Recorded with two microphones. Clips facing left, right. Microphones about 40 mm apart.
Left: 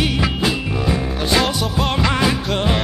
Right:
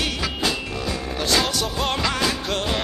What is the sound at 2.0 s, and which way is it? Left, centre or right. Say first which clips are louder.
Music: left 5 dB; centre.